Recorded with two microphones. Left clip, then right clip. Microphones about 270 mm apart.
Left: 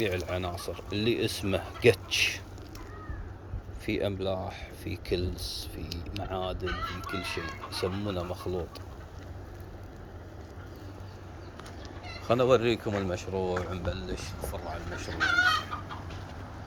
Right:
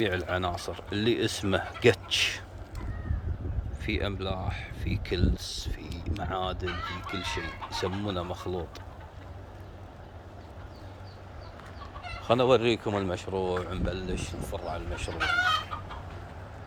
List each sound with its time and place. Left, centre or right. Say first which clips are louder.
0.3 s speech: right 3 dB; centre
3.8 s speech: left 2 dB; centre
12.2 s speech: right 1 dB; centre
15.2 s chicken: left 1 dB; right